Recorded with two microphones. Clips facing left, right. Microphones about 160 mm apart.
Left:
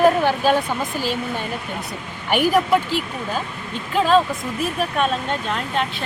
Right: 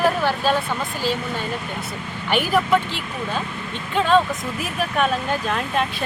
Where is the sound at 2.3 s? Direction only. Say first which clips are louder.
Left 2 dB; 10° left (ahead or behind).